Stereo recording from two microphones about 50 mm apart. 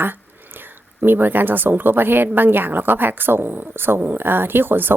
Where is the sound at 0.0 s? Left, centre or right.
Right.